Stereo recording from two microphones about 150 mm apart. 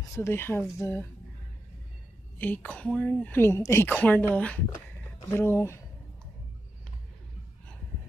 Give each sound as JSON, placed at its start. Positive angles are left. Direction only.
{"t": 0.1, "sound": "a woman's voice", "side_deg": 15}
{"t": 2.3, "sound": "a woman's voice", "side_deg": 10}